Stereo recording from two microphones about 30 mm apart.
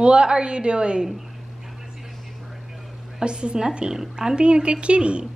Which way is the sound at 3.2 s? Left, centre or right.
Right.